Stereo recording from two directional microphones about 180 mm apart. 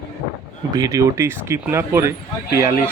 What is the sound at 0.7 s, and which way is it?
Speech, 20° right (ahead or behind).